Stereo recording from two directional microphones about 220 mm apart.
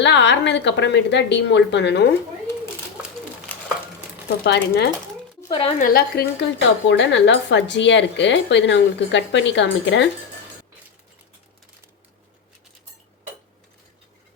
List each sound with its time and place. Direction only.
0.0 s speech: 55° left (ahead or behind)
4.4 s speech: 50° left (ahead or behind)
5.5 s a woman's voice: 25° left (ahead or behind)
5.8 s speech: 45° left (ahead or behind)